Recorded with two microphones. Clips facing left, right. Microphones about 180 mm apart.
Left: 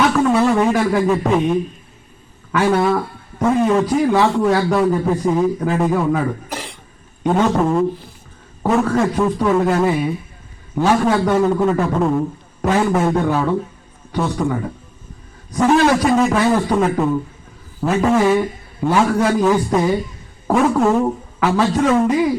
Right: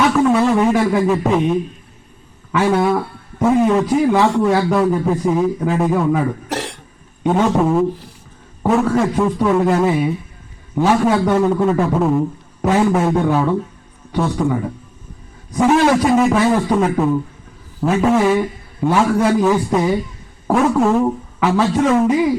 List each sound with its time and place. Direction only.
0.2 s a man's voice: centre (ahead or behind)
2.6 s a man's voice: 5° right (ahead or behind)
6.5 s cough: 75° right (ahead or behind)
7.3 s a man's voice: 5° right (ahead or behind)
14.4 s a man's voice: centre (ahead or behind)